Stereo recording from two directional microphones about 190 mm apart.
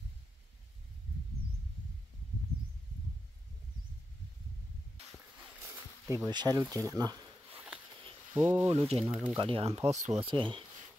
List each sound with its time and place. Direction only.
6.0 s speech: 15° right (ahead or behind)
7.5 s a sound: 5° right (ahead or behind)
8.0 s a sound: 30° right (ahead or behind)
8.6 s speech: 30° right (ahead or behind)
9.1 s speech: 5° right (ahead or behind)
9.4 s speech: 30° right (ahead or behind)